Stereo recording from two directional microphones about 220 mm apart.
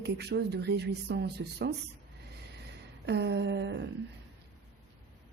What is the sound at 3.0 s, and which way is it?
Speech, 50° right (ahead or behind).